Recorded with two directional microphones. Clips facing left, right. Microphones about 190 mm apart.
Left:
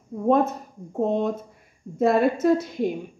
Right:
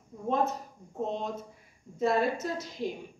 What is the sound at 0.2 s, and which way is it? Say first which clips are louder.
A woman's voice: left 9 dB; 55° left (ahead or behind).